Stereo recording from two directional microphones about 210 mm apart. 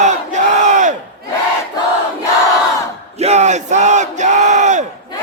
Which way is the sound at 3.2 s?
30° right (ahead or behind).